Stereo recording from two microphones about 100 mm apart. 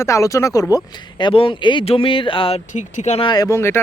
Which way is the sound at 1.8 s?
70° left (ahead or behind).